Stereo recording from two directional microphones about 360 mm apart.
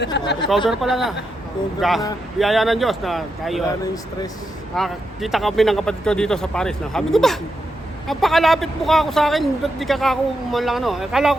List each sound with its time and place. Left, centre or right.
0.0 s speech: left
0.7 s speech: centre
4.7 s speech: centre